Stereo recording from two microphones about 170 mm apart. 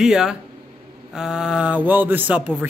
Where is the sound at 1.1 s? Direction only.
5° right (ahead or behind).